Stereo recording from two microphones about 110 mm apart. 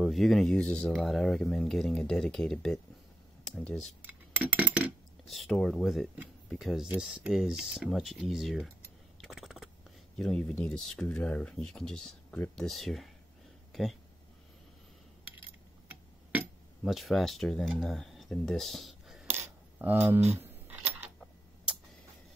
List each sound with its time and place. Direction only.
0.0 s speech: centre (ahead or behind)
4.0 s a sound: 15° right (ahead or behind)
5.3 s speech: 5° left (ahead or behind)
9.2 s a sound: centre (ahead or behind)
10.1 s speech: 5° left (ahead or behind)
13.7 s a sound: centre (ahead or behind)
15.9 s tick-tock: 15° right (ahead or behind)
16.8 s speech: centre (ahead or behind)
19.8 s camera: 15° right (ahead or behind)